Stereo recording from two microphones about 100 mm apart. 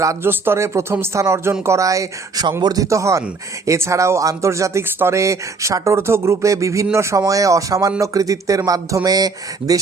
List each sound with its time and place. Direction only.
0.0 s speech: 25° right (ahead or behind); by 2.8 s 45° right (ahead or behind)
2.8 s speech: 30° right (ahead or behind)